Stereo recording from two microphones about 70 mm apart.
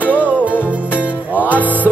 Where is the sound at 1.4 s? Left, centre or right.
Left.